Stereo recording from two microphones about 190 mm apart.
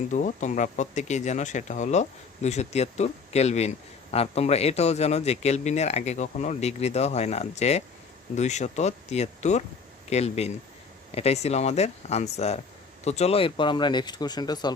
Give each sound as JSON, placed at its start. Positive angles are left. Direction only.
{"t": 0.1, "sound": "a man's voice", "side_deg": 40}